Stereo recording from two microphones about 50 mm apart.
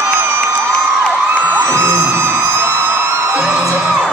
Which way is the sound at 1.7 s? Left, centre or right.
Right.